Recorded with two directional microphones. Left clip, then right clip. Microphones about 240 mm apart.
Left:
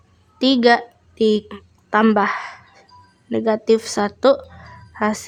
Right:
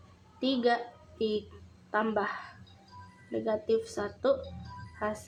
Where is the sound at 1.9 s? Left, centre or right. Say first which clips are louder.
Left 14 dB; left.